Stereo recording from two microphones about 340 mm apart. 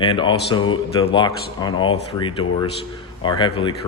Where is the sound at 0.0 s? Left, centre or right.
Centre.